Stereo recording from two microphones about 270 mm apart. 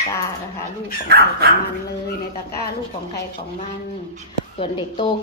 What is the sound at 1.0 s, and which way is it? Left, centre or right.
Speech, right.